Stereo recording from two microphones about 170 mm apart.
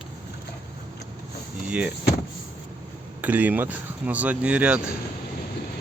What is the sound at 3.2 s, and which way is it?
Speech, 10° right (ahead or behind).